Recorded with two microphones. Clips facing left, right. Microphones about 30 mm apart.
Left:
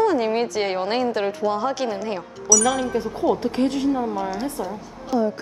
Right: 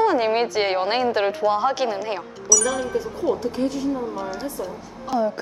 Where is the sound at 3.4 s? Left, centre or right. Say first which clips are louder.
Left 2 dB; left.